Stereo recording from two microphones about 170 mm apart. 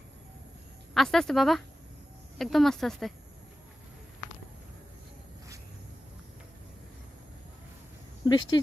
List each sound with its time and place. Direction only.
0.9 s speech: centre (ahead or behind)
8.2 s speech: 25° left (ahead or behind)